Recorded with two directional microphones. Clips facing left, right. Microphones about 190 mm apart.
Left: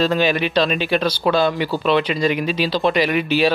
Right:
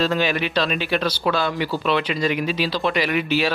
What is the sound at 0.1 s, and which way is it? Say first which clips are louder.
Speech: left 3 dB; 25° left (ahead or behind).